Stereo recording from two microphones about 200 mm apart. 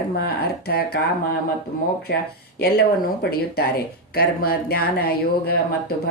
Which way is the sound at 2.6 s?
55° left (ahead or behind).